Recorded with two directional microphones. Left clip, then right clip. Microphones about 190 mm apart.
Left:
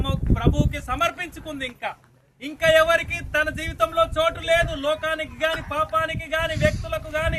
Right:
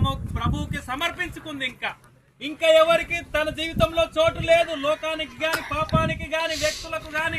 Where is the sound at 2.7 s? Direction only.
55° left (ahead or behind).